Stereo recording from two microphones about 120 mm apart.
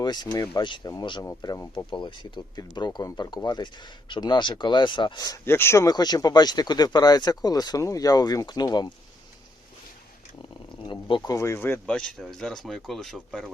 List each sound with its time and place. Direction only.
0.0 s speech: 35° left (ahead or behind)
5.5 s speech: 20° left (ahead or behind)
11.3 s speech: 25° left (ahead or behind)
11.9 s speech: 10° left (ahead or behind)